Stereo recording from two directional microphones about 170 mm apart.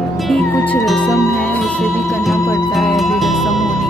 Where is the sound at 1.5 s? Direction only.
5° left (ahead or behind).